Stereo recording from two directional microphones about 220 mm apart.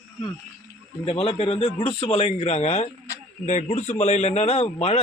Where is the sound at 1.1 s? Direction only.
25° left (ahead or behind).